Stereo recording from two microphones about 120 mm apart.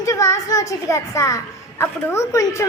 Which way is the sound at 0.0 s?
25° left (ahead or behind).